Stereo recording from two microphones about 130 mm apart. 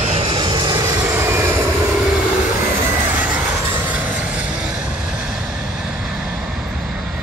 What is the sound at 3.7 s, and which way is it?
Vehicle, 10° right (ahead or behind).